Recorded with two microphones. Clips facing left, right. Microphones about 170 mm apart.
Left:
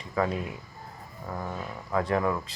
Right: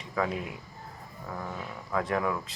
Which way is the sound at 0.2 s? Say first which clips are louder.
Left 3 dB; centre (ahead or behind).